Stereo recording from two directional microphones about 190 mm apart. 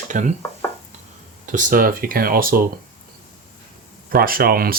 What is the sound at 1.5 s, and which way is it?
Speech, 45° right (ahead or behind).